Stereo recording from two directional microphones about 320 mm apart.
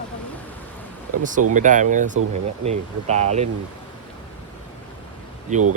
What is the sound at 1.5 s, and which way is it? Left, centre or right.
Speech, right.